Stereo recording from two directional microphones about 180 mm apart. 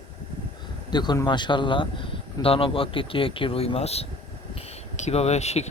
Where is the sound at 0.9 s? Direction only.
25° left (ahead or behind).